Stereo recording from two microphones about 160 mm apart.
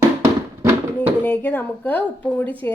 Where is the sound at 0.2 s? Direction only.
15° right (ahead or behind).